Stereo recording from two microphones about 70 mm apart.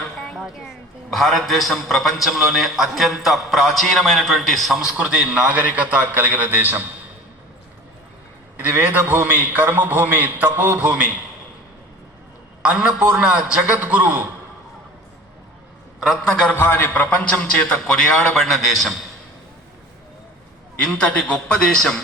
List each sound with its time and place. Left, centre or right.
0.3 s a man's voice: centre; by 6.8 s right
8.5 s a man's voice: right
12.7 s a man's voice: centre
16.0 s a man's voice: centre
16.3 s a man's voice: centre
16.6 s a man's voice: left; by 18.9 s centre
20.8 s a man's voice: centre